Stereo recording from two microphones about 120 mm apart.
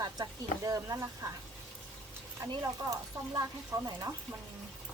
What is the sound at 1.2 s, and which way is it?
Chopping, 25° right (ahead or behind).